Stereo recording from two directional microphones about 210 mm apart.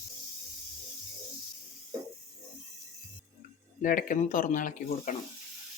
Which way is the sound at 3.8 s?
40° left (ahead or behind).